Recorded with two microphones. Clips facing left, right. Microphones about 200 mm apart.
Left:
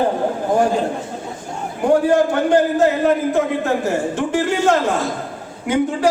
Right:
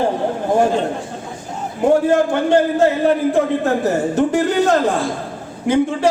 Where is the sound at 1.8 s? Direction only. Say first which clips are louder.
Right 1 dB; 25° right (ahead or behind).